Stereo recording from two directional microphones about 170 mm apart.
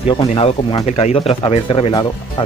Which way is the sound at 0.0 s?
35° left (ahead or behind).